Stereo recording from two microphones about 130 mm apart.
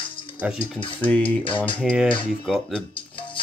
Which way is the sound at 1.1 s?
10° left (ahead or behind).